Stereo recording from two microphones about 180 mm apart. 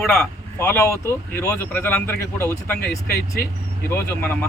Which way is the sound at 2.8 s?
55° left (ahead or behind).